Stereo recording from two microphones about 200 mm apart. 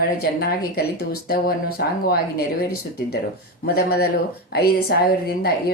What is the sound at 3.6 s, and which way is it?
Speech, 50° left (ahead or behind).